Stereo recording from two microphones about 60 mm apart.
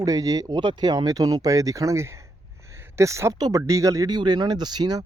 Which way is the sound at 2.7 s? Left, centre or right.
Right.